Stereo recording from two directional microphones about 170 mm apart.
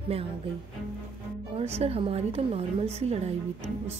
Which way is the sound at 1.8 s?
35° right (ahead or behind).